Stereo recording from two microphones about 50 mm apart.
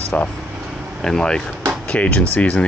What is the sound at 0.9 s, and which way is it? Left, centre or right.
Speech, centre.